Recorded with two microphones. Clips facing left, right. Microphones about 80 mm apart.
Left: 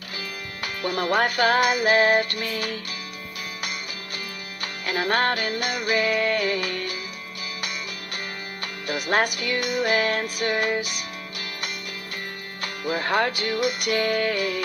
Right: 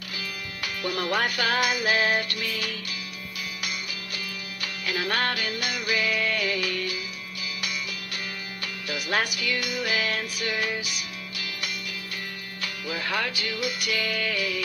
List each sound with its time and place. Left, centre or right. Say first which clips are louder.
0.8 s music: left 4 dB; left
4.6 s music: left 3 dB; left
8.8 s music: left 5 dB; left
12.6 s music: left 5 dB; left